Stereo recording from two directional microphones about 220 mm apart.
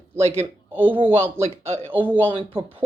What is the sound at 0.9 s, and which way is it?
Speech, 25° right (ahead or behind).